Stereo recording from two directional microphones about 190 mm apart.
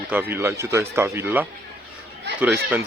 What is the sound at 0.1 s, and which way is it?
Speech, 10° right (ahead or behind).